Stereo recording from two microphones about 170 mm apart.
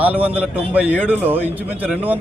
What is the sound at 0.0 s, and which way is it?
Speech, 10° right (ahead or behind).